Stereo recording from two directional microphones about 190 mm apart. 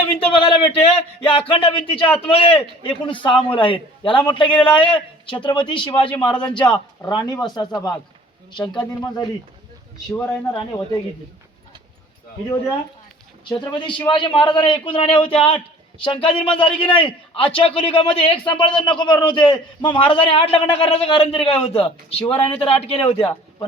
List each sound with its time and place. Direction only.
0.0 s a man's voice: 25° left (ahead or behind)
13.5 s a man's voice: 25° left (ahead or behind)